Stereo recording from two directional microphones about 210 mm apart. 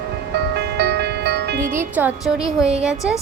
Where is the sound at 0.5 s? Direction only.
50° right (ahead or behind).